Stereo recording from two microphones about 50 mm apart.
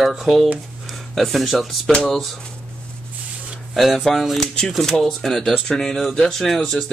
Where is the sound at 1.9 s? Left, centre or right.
Centre.